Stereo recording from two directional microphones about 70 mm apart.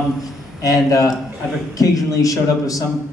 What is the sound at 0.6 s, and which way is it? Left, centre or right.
A man's voice, left.